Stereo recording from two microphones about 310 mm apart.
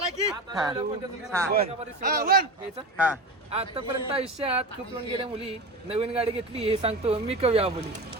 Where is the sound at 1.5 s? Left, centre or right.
Right.